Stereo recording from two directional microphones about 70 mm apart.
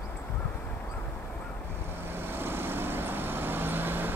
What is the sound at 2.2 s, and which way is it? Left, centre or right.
Vehicle, right.